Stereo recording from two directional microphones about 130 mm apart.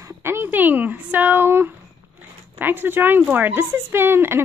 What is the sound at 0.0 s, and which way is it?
Speech, 20° right (ahead or behind).